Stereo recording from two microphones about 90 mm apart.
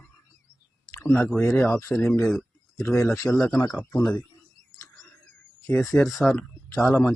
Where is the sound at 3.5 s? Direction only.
50° left (ahead or behind).